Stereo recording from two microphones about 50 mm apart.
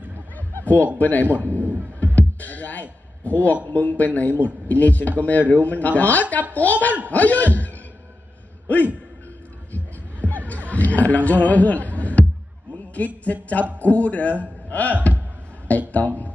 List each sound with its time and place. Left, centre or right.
0.6 s chuckle: left
0.9 s speech: left
1.6 s a sound: right
2.1 s music: left
3.7 s speech: left
9.7 s a sound: left
10.7 s music: left
12.7 s a man's voice: left